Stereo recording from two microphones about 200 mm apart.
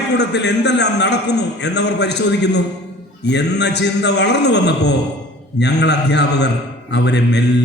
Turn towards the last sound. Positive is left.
turn(degrees=60)  # may be behind; listen again after turning